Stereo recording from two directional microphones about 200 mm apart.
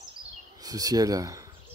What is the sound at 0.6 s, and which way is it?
Speech, 15° right (ahead or behind).